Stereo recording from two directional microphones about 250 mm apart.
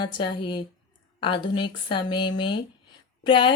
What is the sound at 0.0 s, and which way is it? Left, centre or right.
Speech, centre.